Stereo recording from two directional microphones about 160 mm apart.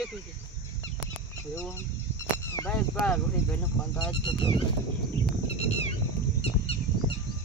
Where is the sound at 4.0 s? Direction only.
30° left (ahead or behind).